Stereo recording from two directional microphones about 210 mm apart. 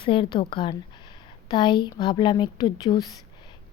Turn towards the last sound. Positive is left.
turn(degrees=20)  # may be behind; listen again after turning